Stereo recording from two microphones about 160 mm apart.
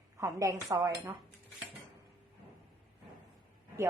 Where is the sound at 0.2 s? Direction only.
20° right (ahead or behind).